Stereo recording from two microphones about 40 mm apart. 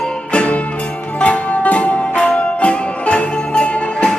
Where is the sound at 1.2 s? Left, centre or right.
Left.